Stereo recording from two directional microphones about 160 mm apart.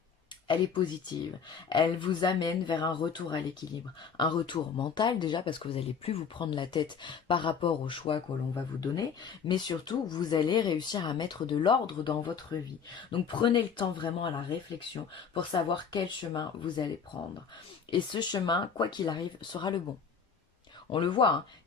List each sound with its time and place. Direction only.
1.7 s speech: 30° left (ahead or behind)
15.4 s speech: 30° left (ahead or behind)
17.9 s speech: 30° left (ahead or behind)
20.9 s speech: 30° left (ahead or behind)